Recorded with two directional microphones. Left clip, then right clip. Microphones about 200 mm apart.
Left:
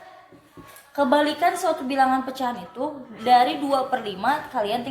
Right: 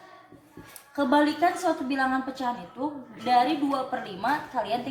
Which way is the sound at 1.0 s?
40° left (ahead or behind).